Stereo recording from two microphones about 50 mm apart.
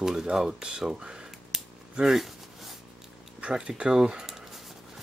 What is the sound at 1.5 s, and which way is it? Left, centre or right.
Scissors, centre.